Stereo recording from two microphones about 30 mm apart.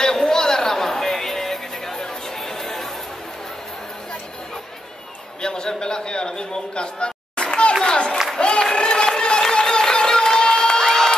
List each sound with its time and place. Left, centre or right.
0.0 s music: left
5.4 s a sound: left
8.4 s applause: left
8.7 s run: left
9.5 s crowd: left